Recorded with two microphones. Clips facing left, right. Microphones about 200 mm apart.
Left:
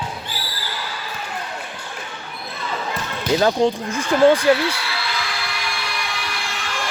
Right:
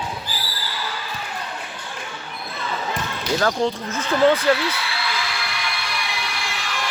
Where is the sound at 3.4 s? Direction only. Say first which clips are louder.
Left 4 dB; 20° left (ahead or behind).